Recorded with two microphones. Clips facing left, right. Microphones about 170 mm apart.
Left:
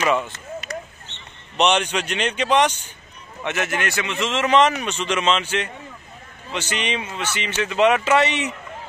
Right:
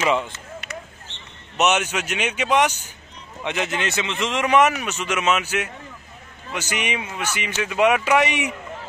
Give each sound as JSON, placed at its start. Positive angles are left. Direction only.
{"t": 0.0, "sound": "speech", "side_deg": -15}
{"t": 1.6, "sound": "speech", "side_deg": -5}